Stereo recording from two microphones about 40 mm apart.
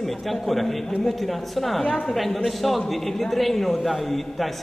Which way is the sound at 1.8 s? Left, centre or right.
Left.